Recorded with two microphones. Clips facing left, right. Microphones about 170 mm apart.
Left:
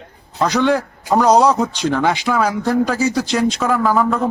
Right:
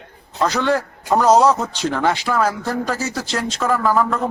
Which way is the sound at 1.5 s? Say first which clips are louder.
Left 2 dB; 10° left (ahead or behind).